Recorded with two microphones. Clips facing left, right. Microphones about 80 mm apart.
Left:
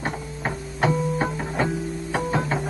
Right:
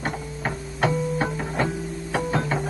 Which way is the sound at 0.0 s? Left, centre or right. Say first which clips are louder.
Even; centre.